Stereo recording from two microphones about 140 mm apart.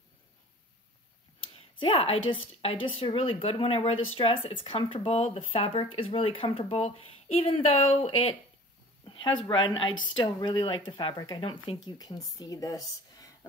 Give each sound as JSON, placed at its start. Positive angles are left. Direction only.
{"t": 1.5, "sound": "a woman's voice", "side_deg": 40}